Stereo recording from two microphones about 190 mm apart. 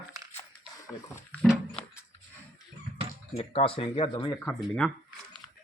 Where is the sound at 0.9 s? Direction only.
15° left (ahead or behind).